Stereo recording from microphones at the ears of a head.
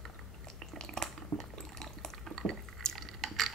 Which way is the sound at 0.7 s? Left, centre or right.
Right.